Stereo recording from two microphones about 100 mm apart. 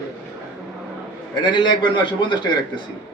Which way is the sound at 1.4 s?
50° left (ahead or behind).